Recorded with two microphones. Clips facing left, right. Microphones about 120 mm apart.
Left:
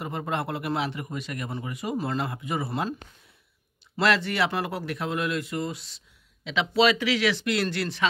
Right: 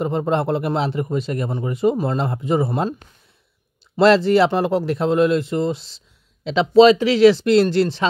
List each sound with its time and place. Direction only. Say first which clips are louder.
0.0 s a man's voice: right 10 dB; 30° right (ahead or behind)
3.9 s a man's voice: right 11 dB; 30° right (ahead or behind)